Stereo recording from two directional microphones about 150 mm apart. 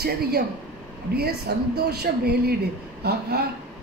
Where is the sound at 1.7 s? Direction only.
90° right.